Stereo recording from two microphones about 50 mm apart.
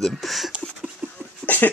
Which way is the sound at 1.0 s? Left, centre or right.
Right.